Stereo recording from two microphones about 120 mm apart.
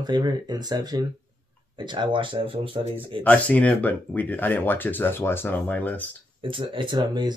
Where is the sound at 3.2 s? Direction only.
10° left (ahead or behind).